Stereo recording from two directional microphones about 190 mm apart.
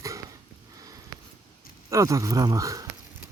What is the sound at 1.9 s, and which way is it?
Speech, 15° right (ahead or behind).